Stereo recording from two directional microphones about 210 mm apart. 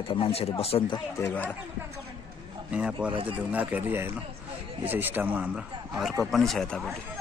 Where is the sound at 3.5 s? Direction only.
5° right (ahead or behind).